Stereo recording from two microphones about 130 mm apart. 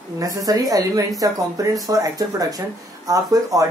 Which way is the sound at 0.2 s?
25° right (ahead or behind).